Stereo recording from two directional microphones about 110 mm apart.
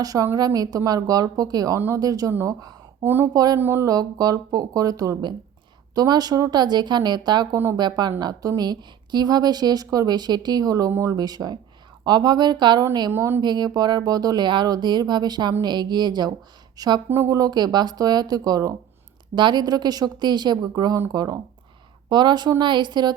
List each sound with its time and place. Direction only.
0.0 s a woman's voice: 35° right (ahead or behind)
3.0 s speech: 20° right (ahead or behind)
3.3 s a woman's voice: 35° right (ahead or behind)
3.6 s a woman's voice: 25° right (ahead or behind); by 7.4 s 40° right (ahead or behind)
7.5 s speech: 25° right (ahead or behind)
7.8 s a woman's voice: 40° right (ahead or behind)
13.1 s speech: 25° right (ahead or behind)
13.4 s a woman's voice: 40° right (ahead or behind)